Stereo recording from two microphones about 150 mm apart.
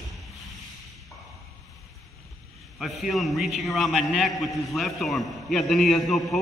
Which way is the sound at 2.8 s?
Centre (ahead or behind).